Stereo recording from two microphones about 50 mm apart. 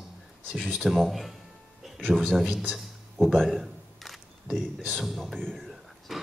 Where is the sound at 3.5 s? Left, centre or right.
Centre.